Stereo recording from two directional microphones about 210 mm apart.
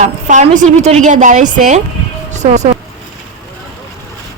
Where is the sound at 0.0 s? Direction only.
35° right (ahead or behind).